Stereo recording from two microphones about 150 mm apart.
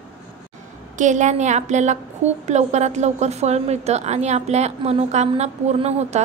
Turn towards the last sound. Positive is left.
turn(degrees=-45)  # may be behind; listen again after turning